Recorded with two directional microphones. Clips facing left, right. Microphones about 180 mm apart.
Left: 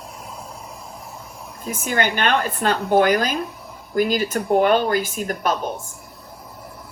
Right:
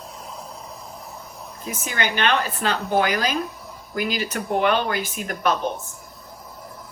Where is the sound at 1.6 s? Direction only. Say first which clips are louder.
Left 5 dB; 50° left (ahead or behind).